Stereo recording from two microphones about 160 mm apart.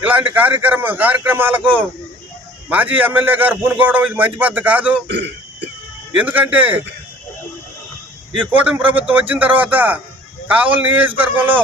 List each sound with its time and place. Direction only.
0.1 s a man's voice: 10° right (ahead or behind)
5.0 s a man's voice: 90° right
6.1 s speech: 10° right (ahead or behind)
8.4 s speech: 10° right (ahead or behind)